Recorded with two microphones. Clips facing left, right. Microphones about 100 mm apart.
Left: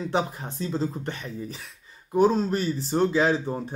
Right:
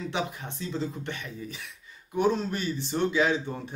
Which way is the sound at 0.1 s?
35° left (ahead or behind).